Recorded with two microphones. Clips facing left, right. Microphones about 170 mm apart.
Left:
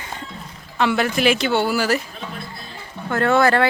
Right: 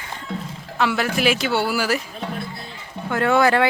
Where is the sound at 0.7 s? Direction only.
5° right (ahead or behind).